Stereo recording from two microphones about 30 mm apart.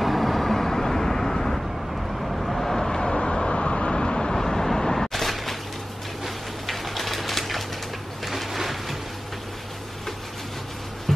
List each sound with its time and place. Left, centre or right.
0.0 s vehicle: centre
2.1 s vehicle: centre
3.0 s vehicle: left; by 5.6 s centre
6.6 s pigeon: centre
8.3 s a sound: centre
11.1 s a sound: centre